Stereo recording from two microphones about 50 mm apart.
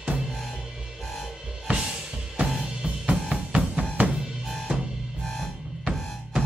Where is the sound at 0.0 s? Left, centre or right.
Centre.